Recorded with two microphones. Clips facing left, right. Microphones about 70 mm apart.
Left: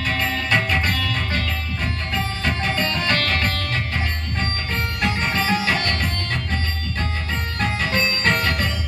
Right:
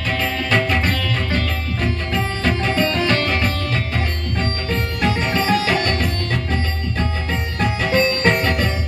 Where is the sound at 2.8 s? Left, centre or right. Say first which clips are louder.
Right 5 dB; centre.